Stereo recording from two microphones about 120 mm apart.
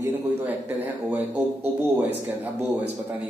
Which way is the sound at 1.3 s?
20° right (ahead or behind).